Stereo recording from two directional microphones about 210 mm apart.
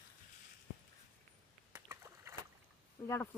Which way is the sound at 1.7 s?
10° right (ahead or behind).